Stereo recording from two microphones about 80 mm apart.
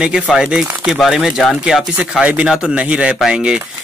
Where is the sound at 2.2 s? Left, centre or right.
Centre.